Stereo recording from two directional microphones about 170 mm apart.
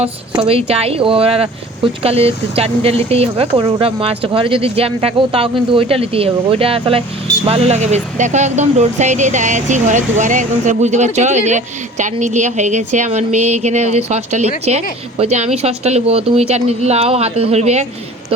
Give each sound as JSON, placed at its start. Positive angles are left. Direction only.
{"t": 0.0, "sound": "speech", "side_deg": -35}